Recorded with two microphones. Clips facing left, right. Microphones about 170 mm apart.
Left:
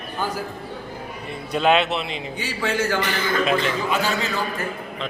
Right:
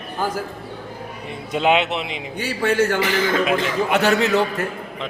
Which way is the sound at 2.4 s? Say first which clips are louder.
Right 6 dB; 55° right (ahead or behind).